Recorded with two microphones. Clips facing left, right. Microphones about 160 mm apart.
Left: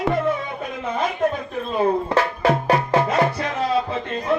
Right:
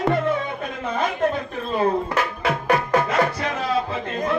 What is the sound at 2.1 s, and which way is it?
Music, 30° left (ahead or behind).